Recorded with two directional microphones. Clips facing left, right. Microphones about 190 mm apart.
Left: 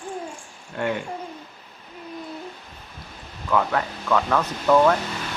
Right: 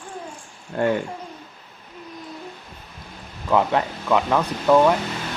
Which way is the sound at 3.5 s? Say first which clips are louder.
Right 3 dB; 20° right (ahead or behind).